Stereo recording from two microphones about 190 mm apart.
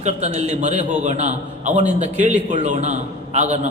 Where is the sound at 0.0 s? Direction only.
35° right (ahead or behind).